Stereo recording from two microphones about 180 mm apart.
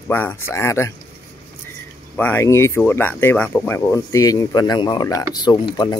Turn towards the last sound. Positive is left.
turn(degrees=25)  # may be behind; listen again after turning